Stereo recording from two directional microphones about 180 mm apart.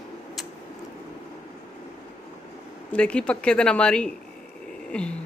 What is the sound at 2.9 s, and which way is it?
A child's voice, 5° left (ahead or behind).